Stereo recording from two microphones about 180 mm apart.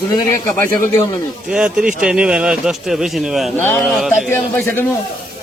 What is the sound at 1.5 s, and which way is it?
Speech, 5° right (ahead or behind).